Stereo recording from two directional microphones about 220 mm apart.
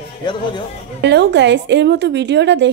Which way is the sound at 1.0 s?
50° right (ahead or behind).